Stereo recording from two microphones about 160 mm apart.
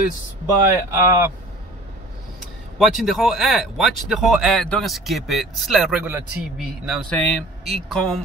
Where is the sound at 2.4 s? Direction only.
Centre (ahead or behind).